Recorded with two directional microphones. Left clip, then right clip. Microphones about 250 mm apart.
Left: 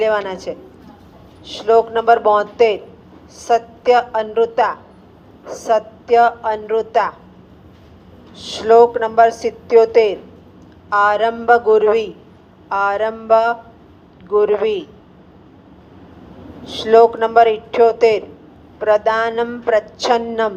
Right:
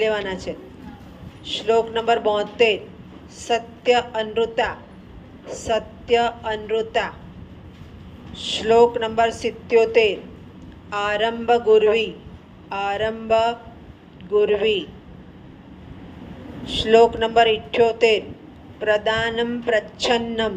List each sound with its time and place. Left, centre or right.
0.0 s a woman's voice: left
8.3 s a woman's voice: left
16.6 s a woman's voice: left